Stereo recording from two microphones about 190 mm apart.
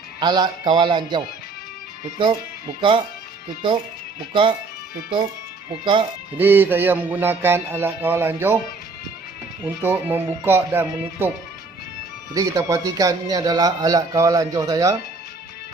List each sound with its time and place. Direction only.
0.2 s speech: 25° right (ahead or behind)
5.8 s speech: 25° right (ahead or behind)
6.3 s speech: 10° right (ahead or behind)
9.6 s speech: 10° right (ahead or behind)
12.3 s speech: 15° right (ahead or behind)